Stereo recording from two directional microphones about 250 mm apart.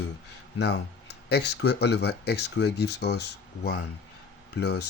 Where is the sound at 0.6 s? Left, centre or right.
Left.